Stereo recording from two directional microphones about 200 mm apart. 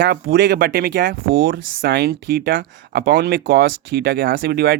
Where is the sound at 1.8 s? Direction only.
50° right (ahead or behind).